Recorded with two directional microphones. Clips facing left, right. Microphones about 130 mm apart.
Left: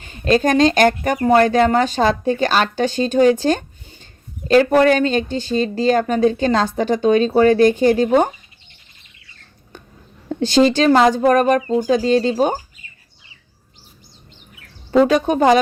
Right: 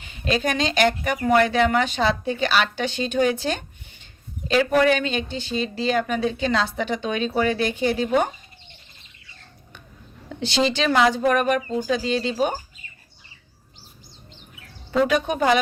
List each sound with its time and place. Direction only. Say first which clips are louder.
0.0 s speech: left 8 dB; 45° left (ahead or behind)
10.2 s speech: left 8 dB; 45° left (ahead or behind)
15.0 s speech: left 5 dB; 35° left (ahead or behind)